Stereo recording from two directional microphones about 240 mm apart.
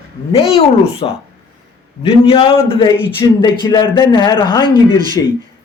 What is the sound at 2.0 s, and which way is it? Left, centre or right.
Speech, left.